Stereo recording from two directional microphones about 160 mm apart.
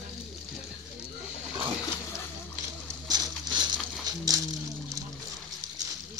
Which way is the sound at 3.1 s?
25° right (ahead or behind).